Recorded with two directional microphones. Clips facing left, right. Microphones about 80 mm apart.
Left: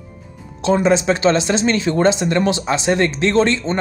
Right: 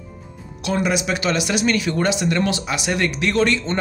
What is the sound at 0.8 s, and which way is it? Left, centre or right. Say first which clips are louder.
Speech: left 7 dB; left.